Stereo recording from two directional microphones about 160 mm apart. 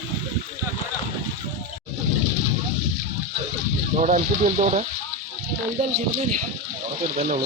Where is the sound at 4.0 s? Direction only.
45° right (ahead or behind).